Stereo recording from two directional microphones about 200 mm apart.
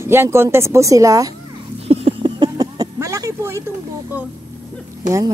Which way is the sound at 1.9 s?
30° right (ahead or behind).